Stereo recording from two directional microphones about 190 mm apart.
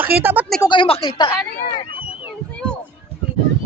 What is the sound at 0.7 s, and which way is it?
Speech, 30° left (ahead or behind).